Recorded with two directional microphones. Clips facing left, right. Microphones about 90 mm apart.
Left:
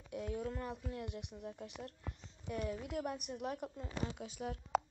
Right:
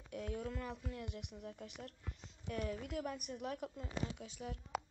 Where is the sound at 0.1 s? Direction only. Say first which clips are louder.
Left 2 dB; 15° left (ahead or behind).